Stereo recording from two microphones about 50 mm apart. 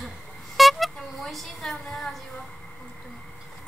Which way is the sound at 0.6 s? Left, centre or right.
Centre.